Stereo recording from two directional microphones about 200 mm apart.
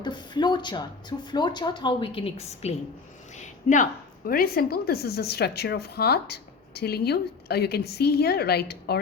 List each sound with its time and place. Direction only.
0.0 s speech: 20° left (ahead or behind)
3.3 s a sound: 40° left (ahead or behind)
4.3 s a woman's voice: 45° left (ahead or behind)